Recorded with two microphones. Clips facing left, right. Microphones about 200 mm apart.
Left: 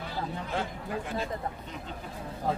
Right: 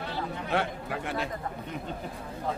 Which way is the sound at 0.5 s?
70° right (ahead or behind).